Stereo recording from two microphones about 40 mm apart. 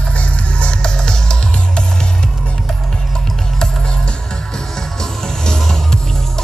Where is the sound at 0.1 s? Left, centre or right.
Left.